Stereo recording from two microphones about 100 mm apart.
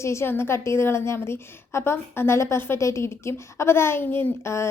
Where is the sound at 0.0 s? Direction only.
25° left (ahead or behind).